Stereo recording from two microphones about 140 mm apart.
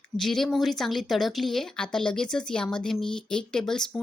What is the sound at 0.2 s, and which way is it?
Speech, centre (ahead or behind).